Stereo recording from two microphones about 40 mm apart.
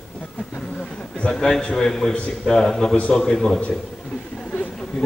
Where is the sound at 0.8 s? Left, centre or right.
Left.